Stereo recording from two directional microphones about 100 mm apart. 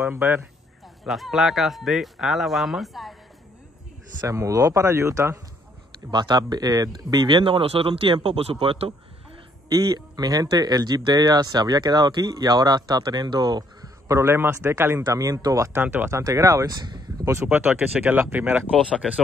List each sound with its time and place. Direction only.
0.0 s speech: 20° right (ahead or behind)
1.0 s speech: centre (ahead or behind)
4.2 s speech: 35° right (ahead or behind)
6.0 s speech: 45° right (ahead or behind); by 8.9 s 70° right (ahead or behind)
9.7 s speech: 35° right (ahead or behind)
15.7 s speech: 20° right (ahead or behind); by 17.3 s 40° right (ahead or behind)
17.3 s speech: 25° right (ahead or behind)